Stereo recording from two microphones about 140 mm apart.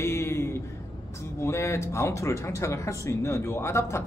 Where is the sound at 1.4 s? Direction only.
20° left (ahead or behind).